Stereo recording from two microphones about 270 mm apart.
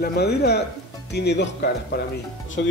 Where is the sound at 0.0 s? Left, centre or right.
Left.